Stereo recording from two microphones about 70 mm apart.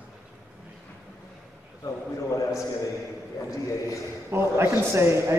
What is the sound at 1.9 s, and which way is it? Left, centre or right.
Speech, left.